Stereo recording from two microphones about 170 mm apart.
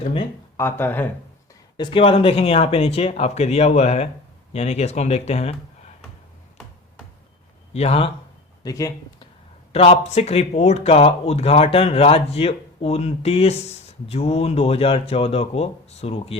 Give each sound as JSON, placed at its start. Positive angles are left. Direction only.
{"t": 0.0, "sound": "speech", "side_deg": 35}
{"t": 0.5, "sound": "speech", "side_deg": 15}
{"t": 1.7, "sound": "speech", "side_deg": 30}
{"t": 7.7, "sound": "speech", "side_deg": 40}
{"t": 8.6, "sound": "speech", "side_deg": 20}
{"t": 9.7, "sound": "speech", "side_deg": 35}